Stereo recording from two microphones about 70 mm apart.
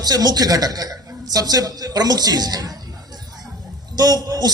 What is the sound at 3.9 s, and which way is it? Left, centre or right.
Speech, right.